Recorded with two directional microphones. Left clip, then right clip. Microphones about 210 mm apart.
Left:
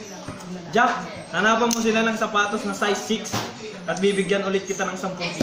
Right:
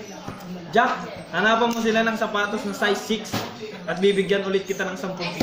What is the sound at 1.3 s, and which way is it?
A man's voice, centre (ahead or behind).